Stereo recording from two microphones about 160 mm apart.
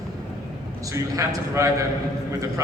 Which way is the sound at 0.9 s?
20° right (ahead or behind).